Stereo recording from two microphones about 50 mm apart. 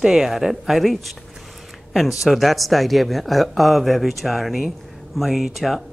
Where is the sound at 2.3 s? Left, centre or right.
Centre.